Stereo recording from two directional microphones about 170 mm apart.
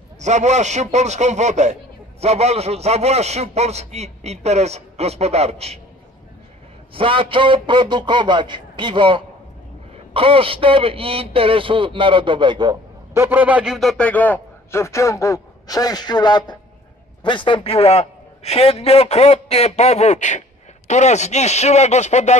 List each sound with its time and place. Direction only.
0.2 s a man's voice: 45° right (ahead or behind)
6.9 s a man's voice: 30° right (ahead or behind)
13.2 s a man's voice: 10° right (ahead or behind); by 22.4 s 40° left (ahead or behind)